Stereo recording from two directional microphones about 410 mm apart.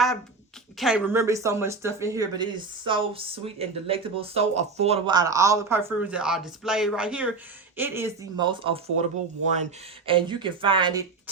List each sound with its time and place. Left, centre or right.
0.8 s speech: centre
10.1 s speech: centre